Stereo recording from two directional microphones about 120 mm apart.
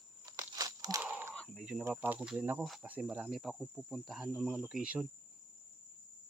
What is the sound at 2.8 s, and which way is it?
Cricket, 10° right (ahead or behind).